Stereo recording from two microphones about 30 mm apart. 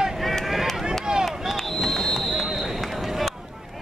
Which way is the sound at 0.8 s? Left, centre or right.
Right.